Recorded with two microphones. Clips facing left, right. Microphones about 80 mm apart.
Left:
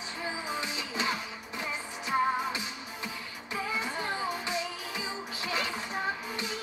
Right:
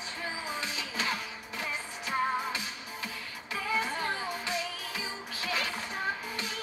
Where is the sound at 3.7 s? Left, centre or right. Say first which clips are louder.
Right 3 dB; left.